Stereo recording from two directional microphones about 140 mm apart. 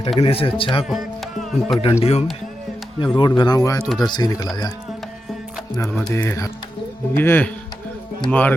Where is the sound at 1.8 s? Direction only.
45° left (ahead or behind).